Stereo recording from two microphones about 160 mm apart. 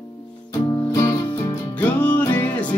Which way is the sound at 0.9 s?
20° left (ahead or behind).